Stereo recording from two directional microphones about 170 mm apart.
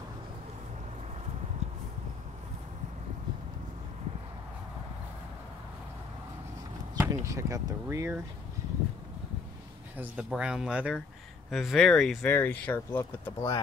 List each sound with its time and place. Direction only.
1.6 s a sound: 40° right (ahead or behind)
7.0 s speech: 15° right (ahead or behind)
9.9 s speech: 5° right (ahead or behind); by 13.6 s 15° left (ahead or behind)